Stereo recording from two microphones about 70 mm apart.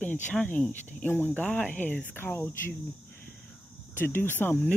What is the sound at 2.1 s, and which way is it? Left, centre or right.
Speech, left.